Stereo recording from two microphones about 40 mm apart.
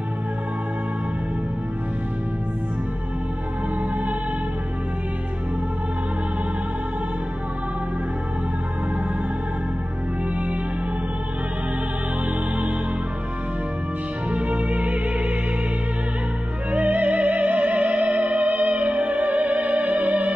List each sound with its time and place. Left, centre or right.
14.3 s music: right
16.7 s music: right